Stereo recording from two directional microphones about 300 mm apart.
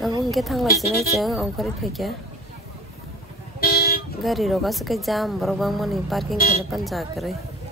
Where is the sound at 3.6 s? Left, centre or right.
Left.